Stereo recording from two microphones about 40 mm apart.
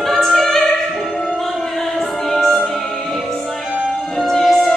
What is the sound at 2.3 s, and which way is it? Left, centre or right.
Music, centre.